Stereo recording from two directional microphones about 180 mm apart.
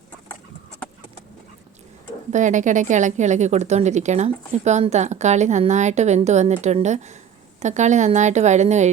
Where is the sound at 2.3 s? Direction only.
45° right (ahead or behind).